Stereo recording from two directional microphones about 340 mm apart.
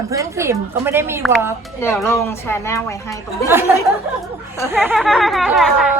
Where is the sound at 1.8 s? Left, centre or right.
Centre.